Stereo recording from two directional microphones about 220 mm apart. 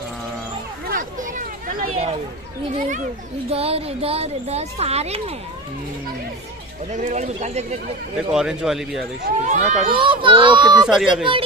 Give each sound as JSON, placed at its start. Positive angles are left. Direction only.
{"t": 0.8, "sound": "a sound", "side_deg": -40}
{"t": 3.4, "sound": "speech", "side_deg": -25}
{"t": 7.0, "sound": "speech", "side_deg": -30}
{"t": 8.3, "sound": "a man's voice", "side_deg": 0}
{"t": 9.2, "sound": "speech", "side_deg": -35}
{"t": 9.9, "sound": "speech", "side_deg": -25}
{"t": 10.9, "sound": "a man's voice", "side_deg": 0}